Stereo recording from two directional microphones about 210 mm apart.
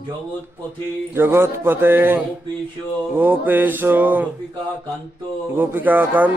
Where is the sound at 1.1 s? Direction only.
10° right (ahead or behind).